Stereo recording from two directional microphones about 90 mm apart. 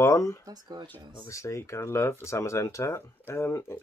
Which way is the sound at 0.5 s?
50° right (ahead or behind).